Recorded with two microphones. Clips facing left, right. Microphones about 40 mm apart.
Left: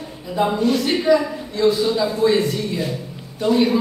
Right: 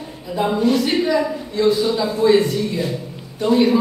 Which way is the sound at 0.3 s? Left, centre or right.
Centre.